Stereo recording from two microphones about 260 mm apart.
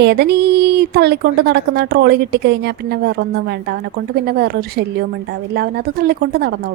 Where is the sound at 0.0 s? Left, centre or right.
Right.